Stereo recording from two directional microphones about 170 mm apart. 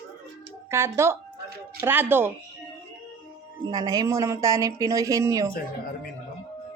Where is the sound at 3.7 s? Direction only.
20° right (ahead or behind).